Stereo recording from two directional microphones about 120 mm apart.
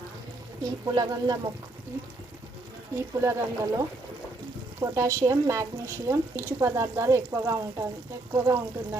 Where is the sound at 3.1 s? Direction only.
20° right (ahead or behind).